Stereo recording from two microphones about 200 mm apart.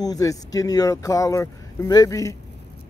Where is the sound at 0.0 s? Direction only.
20° left (ahead or behind).